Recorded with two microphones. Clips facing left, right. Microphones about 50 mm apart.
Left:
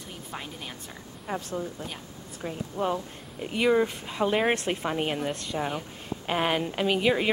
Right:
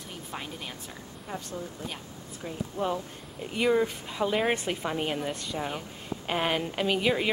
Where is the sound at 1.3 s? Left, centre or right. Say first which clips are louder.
Left 5 dB; left.